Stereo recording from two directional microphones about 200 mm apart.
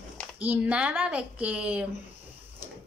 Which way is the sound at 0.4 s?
5° right (ahead or behind).